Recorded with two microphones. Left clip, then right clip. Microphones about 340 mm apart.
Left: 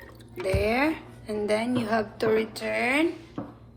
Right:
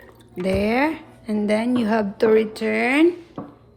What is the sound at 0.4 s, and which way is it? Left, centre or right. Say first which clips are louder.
A woman's voice: right 4 dB; right.